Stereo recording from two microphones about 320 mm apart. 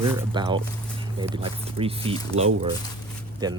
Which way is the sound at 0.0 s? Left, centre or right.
Centre.